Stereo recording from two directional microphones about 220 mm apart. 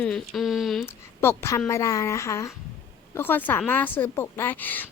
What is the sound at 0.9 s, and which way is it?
Speech, 10° left (ahead or behind).